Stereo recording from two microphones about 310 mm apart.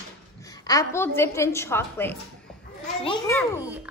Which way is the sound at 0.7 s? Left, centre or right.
Centre.